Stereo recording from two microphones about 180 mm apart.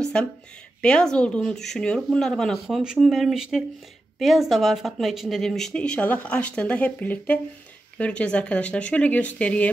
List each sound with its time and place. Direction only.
0.0 s speech: 5° left (ahead or behind)